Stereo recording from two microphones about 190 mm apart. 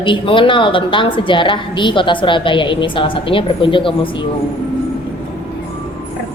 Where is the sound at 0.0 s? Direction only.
25° left (ahead or behind).